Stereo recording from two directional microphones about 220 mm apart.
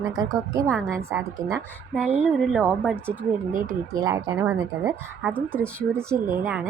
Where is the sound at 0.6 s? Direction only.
5° left (ahead or behind).